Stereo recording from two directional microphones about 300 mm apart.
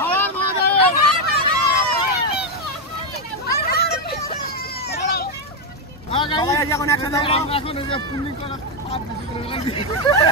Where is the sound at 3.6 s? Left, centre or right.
Left.